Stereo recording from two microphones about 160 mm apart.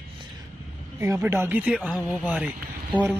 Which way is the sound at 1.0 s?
15° right (ahead or behind).